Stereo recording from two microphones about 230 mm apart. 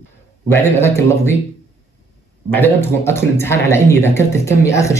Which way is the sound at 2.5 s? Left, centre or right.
Centre.